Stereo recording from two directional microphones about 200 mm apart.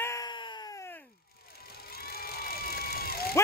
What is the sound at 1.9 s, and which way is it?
Vehicle, 50° left (ahead or behind).